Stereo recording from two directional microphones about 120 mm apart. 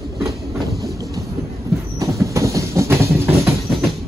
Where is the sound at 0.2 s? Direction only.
Centre (ahead or behind).